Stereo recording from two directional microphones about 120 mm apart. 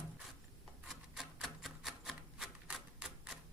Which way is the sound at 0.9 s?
Centre (ahead or behind).